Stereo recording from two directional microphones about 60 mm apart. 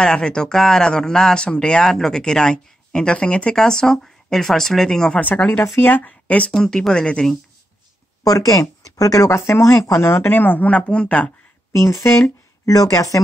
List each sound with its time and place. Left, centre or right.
0.0 s speech: centre
5.8 s speech: left
6.5 s speech: centre
8.2 s speech: left
9.3 s speech: left
9.9 s speech: left
11.7 s speech: left